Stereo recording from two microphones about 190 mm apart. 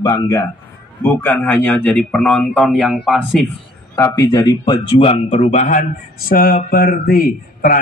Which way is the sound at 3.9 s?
20° left (ahead or behind).